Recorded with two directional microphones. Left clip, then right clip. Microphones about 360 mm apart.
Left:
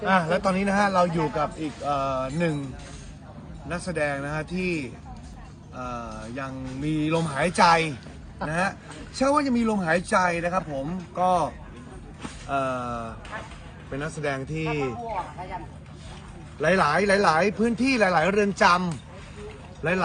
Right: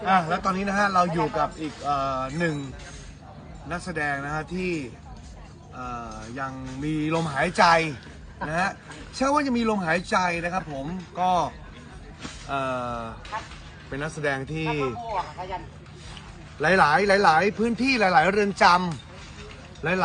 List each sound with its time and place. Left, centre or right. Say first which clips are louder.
0.0 s speech: even; centre
3.7 s speech: left 1 dB; centre
16.6 s speech: right 2 dB; centre